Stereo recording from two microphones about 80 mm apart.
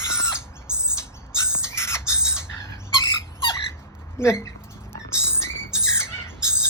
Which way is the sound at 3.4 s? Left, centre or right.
Left.